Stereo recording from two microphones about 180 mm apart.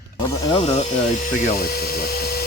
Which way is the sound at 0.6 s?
35° left (ahead or behind).